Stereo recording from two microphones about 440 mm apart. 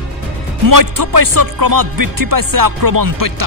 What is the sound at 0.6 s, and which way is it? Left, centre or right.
Speech, right.